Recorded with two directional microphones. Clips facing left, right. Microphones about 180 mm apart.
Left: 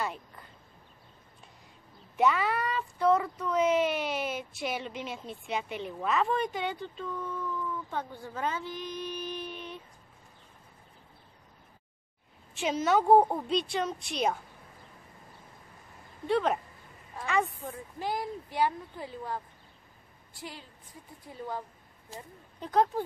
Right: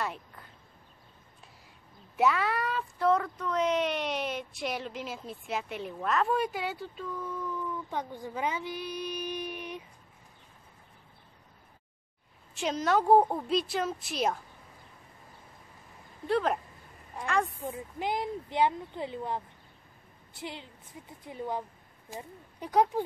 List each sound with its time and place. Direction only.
0.0 s speech: centre (ahead or behind)
2.1 s speech: centre (ahead or behind)
12.5 s speech: centre (ahead or behind)
16.3 s speech: centre (ahead or behind)
17.6 s speech: 20° right (ahead or behind)